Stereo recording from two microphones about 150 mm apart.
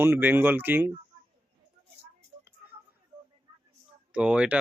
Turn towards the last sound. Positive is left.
turn(degrees=-10)  # may be behind; listen again after turning